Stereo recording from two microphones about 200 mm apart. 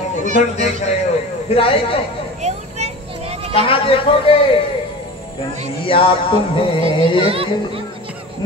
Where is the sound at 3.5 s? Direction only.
30° left (ahead or behind).